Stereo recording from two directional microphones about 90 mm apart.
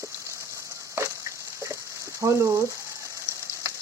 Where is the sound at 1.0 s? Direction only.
25° right (ahead or behind).